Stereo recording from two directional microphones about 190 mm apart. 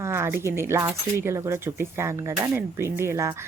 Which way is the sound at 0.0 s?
15° right (ahead or behind).